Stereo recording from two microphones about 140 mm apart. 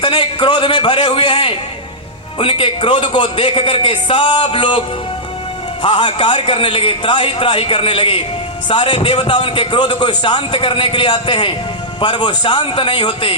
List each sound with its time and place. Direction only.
0.0 s speech: 35° left (ahead or behind)
5.8 s speech: 35° left (ahead or behind)